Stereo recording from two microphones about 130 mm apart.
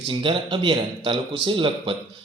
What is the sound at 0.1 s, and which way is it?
Speech, 40° right (ahead or behind).